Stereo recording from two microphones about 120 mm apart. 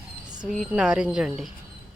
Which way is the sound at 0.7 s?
5° right (ahead or behind).